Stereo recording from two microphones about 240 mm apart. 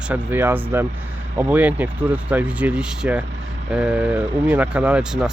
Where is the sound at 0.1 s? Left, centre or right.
Centre.